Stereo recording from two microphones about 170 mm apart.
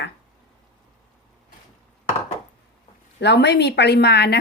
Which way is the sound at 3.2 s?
85° left.